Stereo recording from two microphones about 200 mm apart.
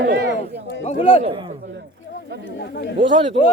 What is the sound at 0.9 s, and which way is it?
Speech, 25° left (ahead or behind).